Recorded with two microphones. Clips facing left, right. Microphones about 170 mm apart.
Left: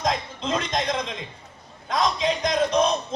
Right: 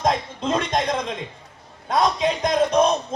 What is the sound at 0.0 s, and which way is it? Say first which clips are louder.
A man's voice: right 4 dB; 50° right (ahead or behind).